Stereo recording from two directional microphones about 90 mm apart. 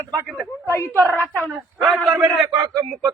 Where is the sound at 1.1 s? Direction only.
20° left (ahead or behind).